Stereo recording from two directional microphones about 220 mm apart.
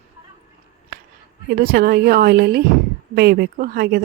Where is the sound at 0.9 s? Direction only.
40° right (ahead or behind).